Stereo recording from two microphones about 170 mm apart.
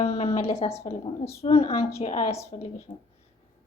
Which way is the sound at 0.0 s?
35° left (ahead or behind).